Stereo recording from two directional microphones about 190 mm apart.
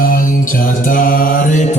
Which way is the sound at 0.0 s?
45° left (ahead or behind).